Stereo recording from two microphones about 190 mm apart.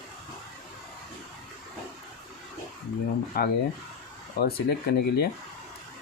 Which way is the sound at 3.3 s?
55° left (ahead or behind).